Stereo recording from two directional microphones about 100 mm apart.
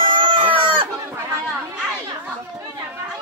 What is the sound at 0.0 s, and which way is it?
Chicken, 60° right (ahead or behind).